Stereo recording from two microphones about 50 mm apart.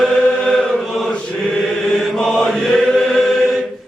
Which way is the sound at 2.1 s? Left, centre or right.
Centre.